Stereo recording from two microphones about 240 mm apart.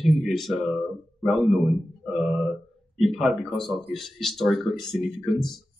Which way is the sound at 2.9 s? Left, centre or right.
Centre.